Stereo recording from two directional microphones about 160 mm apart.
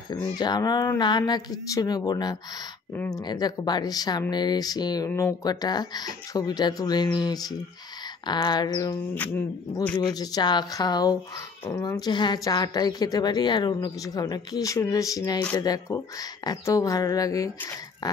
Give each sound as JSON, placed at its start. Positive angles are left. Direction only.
{"t": 0.1, "sound": "speech", "side_deg": 25}
{"t": 9.1, "sound": "speech", "side_deg": 10}
{"t": 9.9, "sound": "speech", "side_deg": 25}